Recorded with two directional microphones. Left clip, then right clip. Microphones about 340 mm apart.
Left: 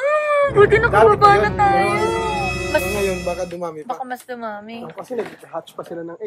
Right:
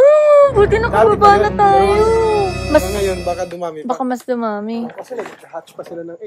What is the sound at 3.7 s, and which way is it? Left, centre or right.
Speech, centre.